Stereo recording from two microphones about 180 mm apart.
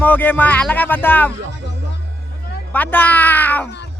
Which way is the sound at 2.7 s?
10° left (ahead or behind).